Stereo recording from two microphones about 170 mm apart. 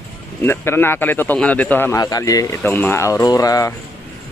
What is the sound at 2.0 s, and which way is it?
Speech, 20° left (ahead or behind).